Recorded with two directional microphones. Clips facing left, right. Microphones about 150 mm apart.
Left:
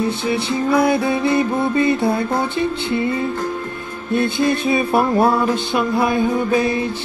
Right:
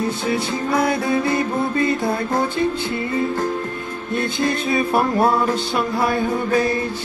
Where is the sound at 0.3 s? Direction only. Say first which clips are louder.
Left 4 dB; 25° left (ahead or behind).